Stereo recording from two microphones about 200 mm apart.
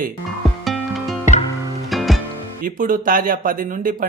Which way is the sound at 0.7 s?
Centre (ahead or behind).